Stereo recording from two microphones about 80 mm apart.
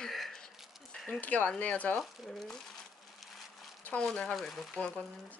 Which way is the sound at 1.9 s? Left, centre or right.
Centre.